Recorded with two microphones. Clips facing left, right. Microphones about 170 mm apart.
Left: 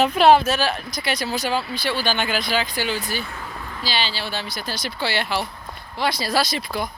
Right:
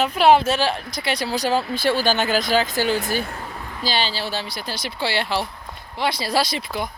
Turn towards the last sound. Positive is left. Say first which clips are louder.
# even
turn(degrees=-20)  # may be behind; listen again after turning